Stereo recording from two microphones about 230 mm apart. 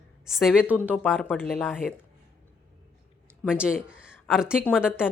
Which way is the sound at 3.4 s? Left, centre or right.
Centre.